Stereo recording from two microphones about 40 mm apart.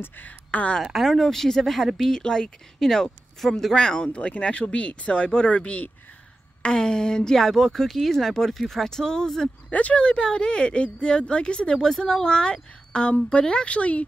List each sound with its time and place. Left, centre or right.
0.2 s speech: left
0.9 s speech: centre
4.1 s speech: left
6.6 s speech: centre
7.4 s speech: centre
9.7 s speech: left
9.9 s speech: left